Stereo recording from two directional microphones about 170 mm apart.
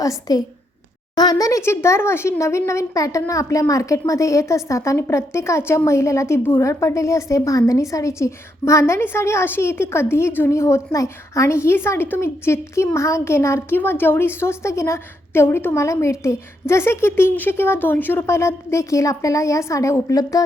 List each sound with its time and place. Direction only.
0.0 s a woman's voice: 20° left (ahead or behind)